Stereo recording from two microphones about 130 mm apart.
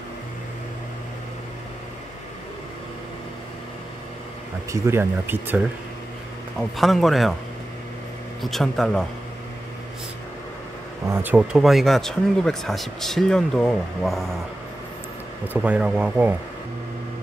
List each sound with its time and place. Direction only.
4.8 s speech: 20° right (ahead or behind)
6.8 s speech: centre (ahead or behind)
8.4 s speech: centre (ahead or behind)
11.3 s speech: 5° right (ahead or behind)
15.4 s speech: 10° right (ahead or behind)